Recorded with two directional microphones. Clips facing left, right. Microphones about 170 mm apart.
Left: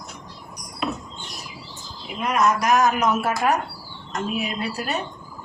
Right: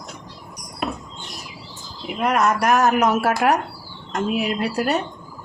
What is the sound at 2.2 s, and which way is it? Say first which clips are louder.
Speech: right 2 dB; 65° right (ahead or behind).